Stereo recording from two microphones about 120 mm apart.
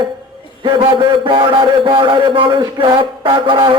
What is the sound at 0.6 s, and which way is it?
A man's voice, 40° right (ahead or behind).